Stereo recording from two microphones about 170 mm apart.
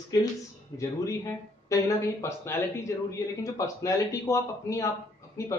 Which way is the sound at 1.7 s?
20° left (ahead or behind).